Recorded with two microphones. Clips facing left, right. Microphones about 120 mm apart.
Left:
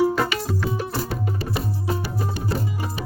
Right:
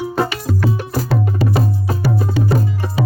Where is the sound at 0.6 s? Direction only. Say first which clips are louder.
Right 5 dB; 90° right.